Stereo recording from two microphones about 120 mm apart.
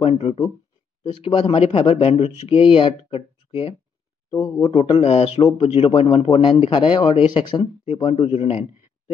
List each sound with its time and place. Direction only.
0.0 s speech: 60° left (ahead or behind)
1.1 s speech: 45° left (ahead or behind)
4.3 s speech: 30° left (ahead or behind)
4.7 s a man's voice: 55° left (ahead or behind)